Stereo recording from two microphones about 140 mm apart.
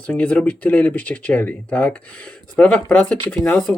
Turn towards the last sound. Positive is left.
turn(degrees=10)  # may be behind; listen again after turning